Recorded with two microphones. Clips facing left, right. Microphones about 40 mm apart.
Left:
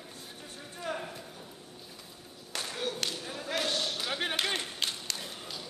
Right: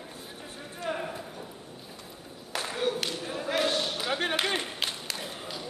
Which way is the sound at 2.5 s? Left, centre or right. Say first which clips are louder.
Right 6 dB; centre.